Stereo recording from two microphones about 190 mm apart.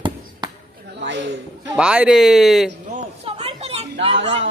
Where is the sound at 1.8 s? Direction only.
5° right (ahead or behind).